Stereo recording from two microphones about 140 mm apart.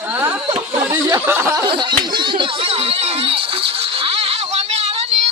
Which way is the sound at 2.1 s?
35° right (ahead or behind).